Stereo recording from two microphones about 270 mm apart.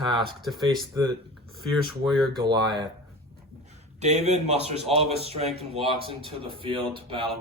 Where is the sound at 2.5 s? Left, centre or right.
Centre.